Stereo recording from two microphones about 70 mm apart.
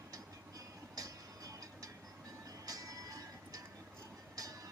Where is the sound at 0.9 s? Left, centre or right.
Right.